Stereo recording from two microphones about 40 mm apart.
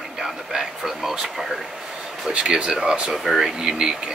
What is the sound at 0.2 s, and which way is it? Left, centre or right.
Speech, centre.